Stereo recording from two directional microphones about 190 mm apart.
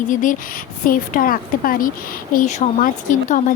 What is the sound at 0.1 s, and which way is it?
Speech, 45° left (ahead or behind).